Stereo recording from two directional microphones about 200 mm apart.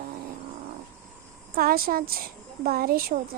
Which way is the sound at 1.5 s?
50° right (ahead or behind).